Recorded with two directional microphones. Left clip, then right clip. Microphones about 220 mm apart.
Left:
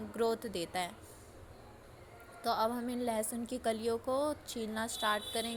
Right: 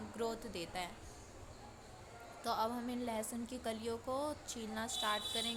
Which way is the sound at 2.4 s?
15° left (ahead or behind).